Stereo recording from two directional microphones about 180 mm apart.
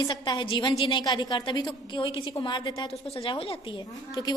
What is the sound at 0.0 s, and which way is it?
A woman's voice, 25° left (ahead or behind).